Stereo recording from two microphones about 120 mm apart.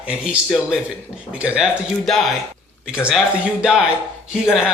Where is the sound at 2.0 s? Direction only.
5° left (ahead or behind).